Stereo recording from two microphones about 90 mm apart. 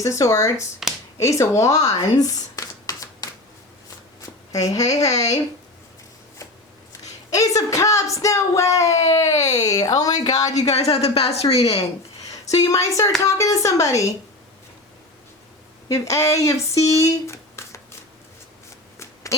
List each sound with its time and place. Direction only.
0.0 s speech: 35° left (ahead or behind)
0.8 s finger snapping: 5° right (ahead or behind)
1.2 s speech: 35° left (ahead or behind)
4.5 s speech: 40° left (ahead or behind)
7.3 s speech: 40° left (ahead or behind)
10.9 s a woman's voice: 90° left
12.5 s speech: 40° left (ahead or behind)
15.9 s speech: 35° left (ahead or behind)
18.9 s shuffling cards: 35° left (ahead or behind)